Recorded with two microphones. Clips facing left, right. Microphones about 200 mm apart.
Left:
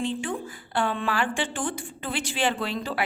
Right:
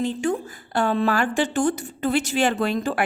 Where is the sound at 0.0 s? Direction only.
40° right (ahead or behind).